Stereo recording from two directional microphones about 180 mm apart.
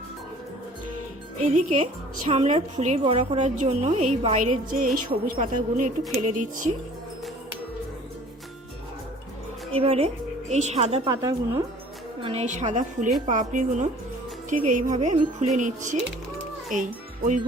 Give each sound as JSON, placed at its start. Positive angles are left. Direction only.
{"t": 1.4, "sound": "a woman's voice", "side_deg": -45}
{"t": 9.7, "sound": "a woman's voice", "side_deg": -35}
{"t": 11.1, "sound": "a woman's voice", "side_deg": -15}
{"t": 12.2, "sound": "a woman's voice", "side_deg": -35}